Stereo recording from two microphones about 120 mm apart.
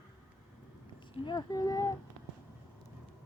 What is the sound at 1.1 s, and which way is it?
Speech, 40° left (ahead or behind).